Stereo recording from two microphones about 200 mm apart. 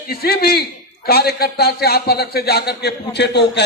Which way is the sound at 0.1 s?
50° left (ahead or behind).